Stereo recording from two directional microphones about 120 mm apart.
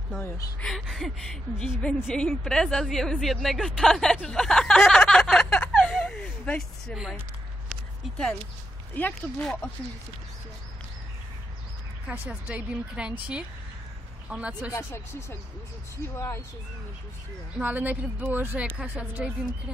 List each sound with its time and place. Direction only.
0.6 s speech: centre (ahead or behind)
7.7 s a sound: 5° left (ahead or behind)
8.9 s speech: 10° left (ahead or behind)
12.1 s a woman's voice: 10° right (ahead or behind)
14.7 s speech: 20° left (ahead or behind)
17.6 s a woman's voice: 15° right (ahead or behind)